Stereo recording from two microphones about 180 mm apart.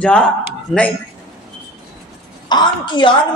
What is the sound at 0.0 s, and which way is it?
Speech, 5° left (ahead or behind).